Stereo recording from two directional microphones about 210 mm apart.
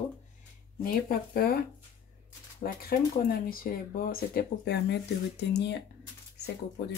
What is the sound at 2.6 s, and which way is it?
Speech, 45° left (ahead or behind).